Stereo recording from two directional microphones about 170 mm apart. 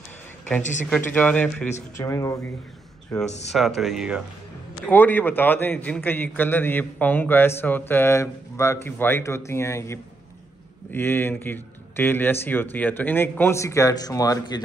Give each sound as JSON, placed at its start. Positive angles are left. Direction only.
{"t": 0.6, "sound": "speech", "side_deg": 45}
{"t": 0.8, "sound": "a man's voice", "side_deg": 5}
{"t": 2.0, "sound": "a man's voice", "side_deg": 20}
{"t": 3.5, "sound": "speech", "side_deg": 0}
{"t": 4.8, "sound": "a man's voice", "side_deg": 10}